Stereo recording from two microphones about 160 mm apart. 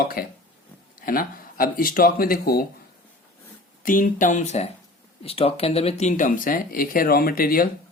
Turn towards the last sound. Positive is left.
turn(degrees=65)  # may be behind; listen again after turning